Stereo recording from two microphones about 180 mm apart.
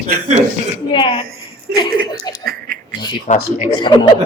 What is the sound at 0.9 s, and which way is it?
Speech, 25° left (ahead or behind).